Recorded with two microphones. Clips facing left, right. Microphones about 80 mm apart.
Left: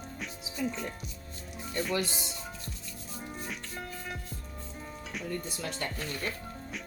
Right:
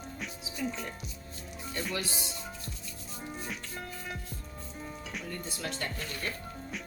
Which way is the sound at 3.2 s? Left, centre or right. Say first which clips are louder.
Right 1 dB; centre.